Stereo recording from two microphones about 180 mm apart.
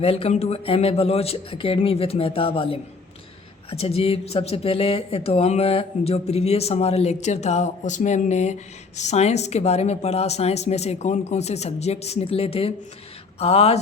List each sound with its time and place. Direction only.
0.0 s speech: 35° left (ahead or behind)